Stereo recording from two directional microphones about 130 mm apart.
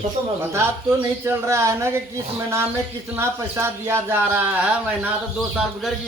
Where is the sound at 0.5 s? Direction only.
20° right (ahead or behind).